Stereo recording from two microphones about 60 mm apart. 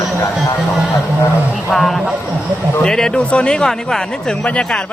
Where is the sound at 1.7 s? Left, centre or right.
Centre.